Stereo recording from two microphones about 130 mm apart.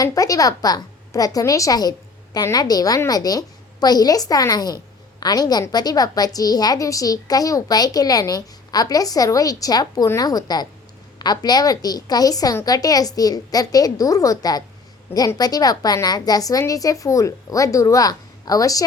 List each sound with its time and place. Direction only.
0.0 s a woman's voice: 25° left (ahead or behind)